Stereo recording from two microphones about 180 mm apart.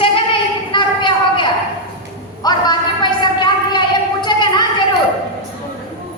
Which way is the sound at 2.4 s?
20° left (ahead or behind).